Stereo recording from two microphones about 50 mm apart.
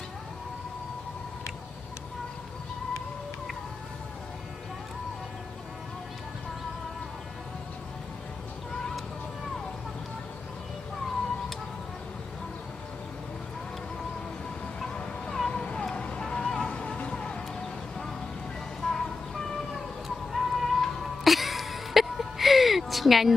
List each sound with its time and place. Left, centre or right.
14.8 s a sound: centre
15.5 s cat: centre
16.0 s vehicle: centre
18.8 s vehicle: centre
20.3 s music: centre